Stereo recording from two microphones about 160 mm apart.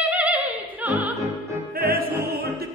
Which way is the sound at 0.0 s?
10° right (ahead or behind).